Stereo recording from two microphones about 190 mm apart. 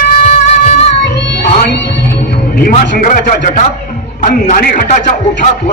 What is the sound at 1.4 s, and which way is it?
Music, 65° left (ahead or behind).